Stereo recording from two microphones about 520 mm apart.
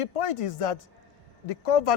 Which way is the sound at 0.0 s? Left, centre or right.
Left.